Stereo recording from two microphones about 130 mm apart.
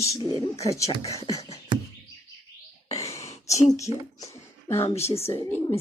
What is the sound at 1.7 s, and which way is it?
Chirp, 40° right (ahead or behind).